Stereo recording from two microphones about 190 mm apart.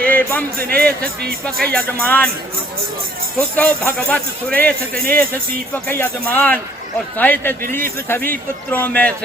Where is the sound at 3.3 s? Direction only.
5° left (ahead or behind).